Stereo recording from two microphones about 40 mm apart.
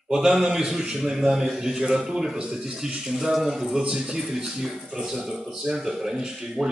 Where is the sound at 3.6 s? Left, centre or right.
Centre.